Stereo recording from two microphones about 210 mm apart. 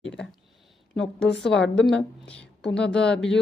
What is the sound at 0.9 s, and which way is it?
A woman's voice, 5° left (ahead or behind).